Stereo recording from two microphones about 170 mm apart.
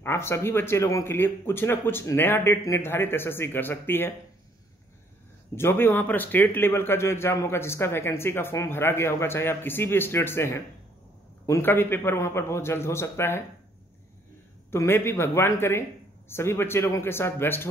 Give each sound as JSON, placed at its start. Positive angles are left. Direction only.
{"t": 0.0, "sound": "speech", "side_deg": 15}
{"t": 5.6, "sound": "speech", "side_deg": 15}
{"t": 14.7, "sound": "speech", "side_deg": 15}